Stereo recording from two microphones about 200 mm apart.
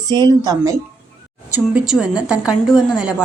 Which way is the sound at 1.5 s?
5° right (ahead or behind).